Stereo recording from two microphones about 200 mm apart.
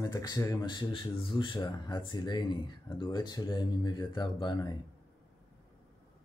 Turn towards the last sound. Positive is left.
turn(degrees=20)  # may be behind; listen again after turning